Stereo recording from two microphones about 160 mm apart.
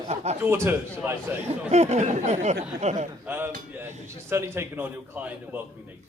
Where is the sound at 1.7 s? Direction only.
45° right (ahead or behind).